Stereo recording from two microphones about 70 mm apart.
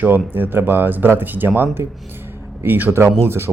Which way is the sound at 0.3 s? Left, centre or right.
Right.